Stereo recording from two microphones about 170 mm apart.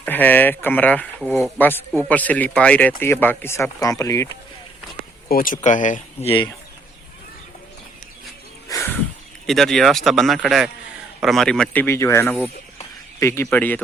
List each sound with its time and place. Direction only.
0.0 s speech: 10° left (ahead or behind)
5.3 s speech: 55° left (ahead or behind)
8.7 s a sound: 15° left (ahead or behind)
9.5 s speech: centre (ahead or behind)